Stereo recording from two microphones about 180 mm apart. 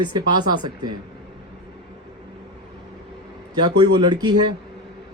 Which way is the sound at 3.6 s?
25° right (ahead or behind).